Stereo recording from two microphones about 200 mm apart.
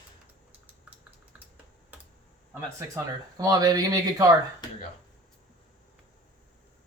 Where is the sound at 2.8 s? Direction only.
15° right (ahead or behind).